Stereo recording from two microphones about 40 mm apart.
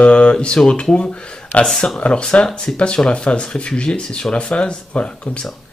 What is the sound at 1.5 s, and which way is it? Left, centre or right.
Speech, left.